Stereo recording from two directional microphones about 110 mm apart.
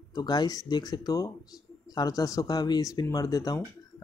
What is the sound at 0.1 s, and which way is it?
Speech, 40° left (ahead or behind).